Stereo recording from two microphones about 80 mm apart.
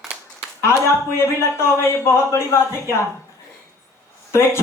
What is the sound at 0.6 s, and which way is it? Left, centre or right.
A man's voice, left.